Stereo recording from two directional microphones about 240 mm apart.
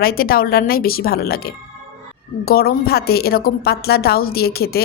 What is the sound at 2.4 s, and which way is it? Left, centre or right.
A woman's voice, left.